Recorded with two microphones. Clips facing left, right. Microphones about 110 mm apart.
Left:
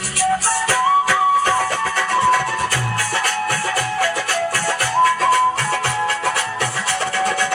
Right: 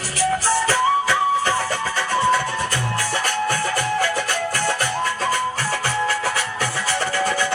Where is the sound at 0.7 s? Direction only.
60° left (ahead or behind).